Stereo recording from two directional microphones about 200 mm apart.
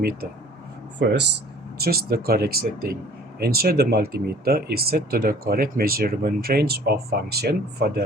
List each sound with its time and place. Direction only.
0.9 s speech: 60° right (ahead or behind)